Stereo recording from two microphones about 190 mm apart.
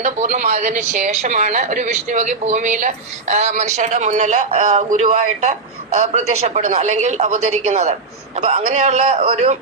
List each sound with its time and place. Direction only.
0.0 s a woman's voice: 40° right (ahead or behind)